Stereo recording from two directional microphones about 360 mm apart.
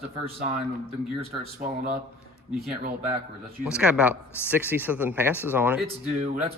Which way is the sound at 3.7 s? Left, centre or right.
Centre.